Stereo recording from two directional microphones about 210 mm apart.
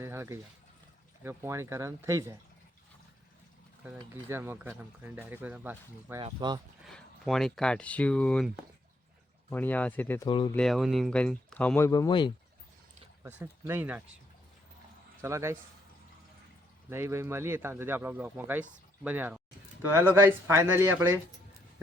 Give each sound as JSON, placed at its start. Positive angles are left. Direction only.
{"t": 0.0, "sound": "a sound", "side_deg": -10}
{"t": 1.2, "sound": "speech", "side_deg": -10}
{"t": 4.1, "sound": "speech", "side_deg": -10}
{"t": 6.1, "sound": "speech", "side_deg": -20}
{"t": 6.8, "sound": "speech", "side_deg": 0}
{"t": 10.2, "sound": "speech", "side_deg": 20}
{"t": 10.5, "sound": "speech", "side_deg": 0}
{"t": 11.9, "sound": "speech", "side_deg": 20}
{"t": 13.2, "sound": "speech", "side_deg": -10}
{"t": 15.2, "sound": "speech", "side_deg": -15}
{"t": 16.9, "sound": "speech", "side_deg": -10}